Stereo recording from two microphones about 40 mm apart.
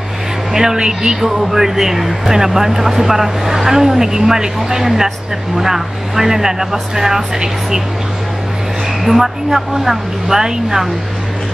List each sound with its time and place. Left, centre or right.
0.5 s speech: centre
1.2 s speech: centre
9.0 s speech: centre